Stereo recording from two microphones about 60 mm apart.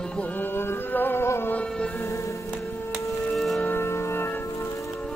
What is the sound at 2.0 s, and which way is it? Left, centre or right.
Music, left.